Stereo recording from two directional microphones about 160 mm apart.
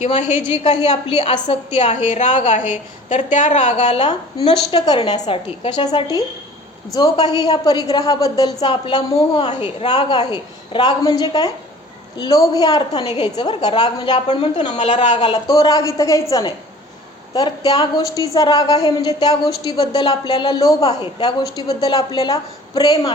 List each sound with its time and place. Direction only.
0.3 s a woman's voice: 45° left (ahead or behind)
2.0 s a woman's voice: 45° left (ahead or behind)
3.8 s a woman's voice: 30° left (ahead or behind)
13.0 s a woman's voice: 35° left (ahead or behind)
13.3 s a woman's voice: 25° left (ahead or behind)
14.3 s a woman's voice: 40° left (ahead or behind)
15.3 s a woman's voice: 25° left (ahead or behind)